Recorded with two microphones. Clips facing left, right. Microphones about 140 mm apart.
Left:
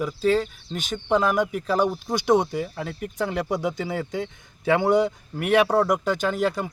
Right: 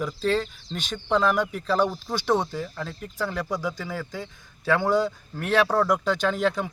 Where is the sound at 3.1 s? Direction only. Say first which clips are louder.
Left 3 dB; 20° left (ahead or behind).